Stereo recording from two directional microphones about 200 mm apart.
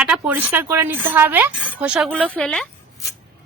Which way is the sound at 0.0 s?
10° right (ahead or behind).